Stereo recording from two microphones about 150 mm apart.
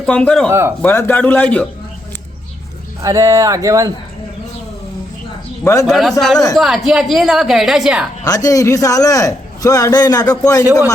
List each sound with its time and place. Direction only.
0.0 s a woman's voice: 5° left (ahead or behind)
3.0 s speech: 20° right (ahead or behind)
5.8 s a woman's voice: centre (ahead or behind)
8.2 s a man's voice: 25° left (ahead or behind)